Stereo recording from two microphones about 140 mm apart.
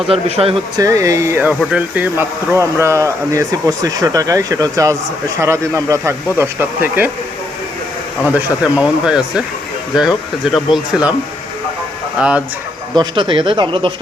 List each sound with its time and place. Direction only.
0.1 s speech: 45° right (ahead or behind)
0.8 s speech: 20° right (ahead or behind)
8.3 s speech: 10° right (ahead or behind)
10.5 s speech: 5° right (ahead or behind)
12.2 s speech: 10° right (ahead or behind)
13.0 s speech: 35° right (ahead or behind)